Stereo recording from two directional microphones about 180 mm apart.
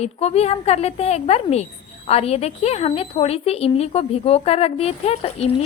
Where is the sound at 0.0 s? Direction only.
35° left (ahead or behind).